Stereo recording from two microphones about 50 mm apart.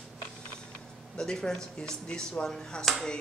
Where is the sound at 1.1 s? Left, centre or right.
Centre.